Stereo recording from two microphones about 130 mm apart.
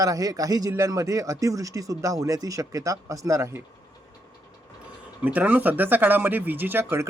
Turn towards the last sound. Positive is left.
turn(degrees=-20)  # may be behind; listen again after turning